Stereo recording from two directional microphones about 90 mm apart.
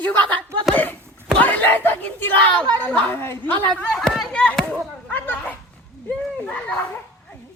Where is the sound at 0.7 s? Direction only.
20° left (ahead or behind).